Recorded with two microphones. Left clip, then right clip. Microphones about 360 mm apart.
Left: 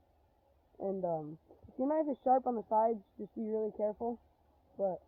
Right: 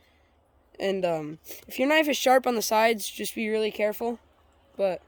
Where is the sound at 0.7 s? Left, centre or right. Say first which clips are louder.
Right 9 dB; right.